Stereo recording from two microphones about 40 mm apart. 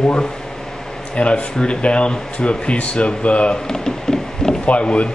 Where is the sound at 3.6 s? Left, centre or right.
Centre.